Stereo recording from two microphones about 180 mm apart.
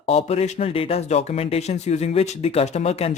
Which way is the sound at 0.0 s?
35° left (ahead or behind).